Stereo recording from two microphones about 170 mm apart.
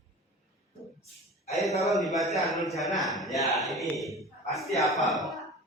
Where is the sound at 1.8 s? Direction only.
Centre (ahead or behind).